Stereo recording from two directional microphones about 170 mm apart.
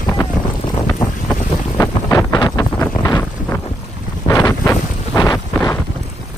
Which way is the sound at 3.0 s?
20° left (ahead or behind).